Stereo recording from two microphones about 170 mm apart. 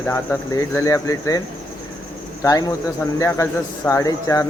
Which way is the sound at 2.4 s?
20° left (ahead or behind).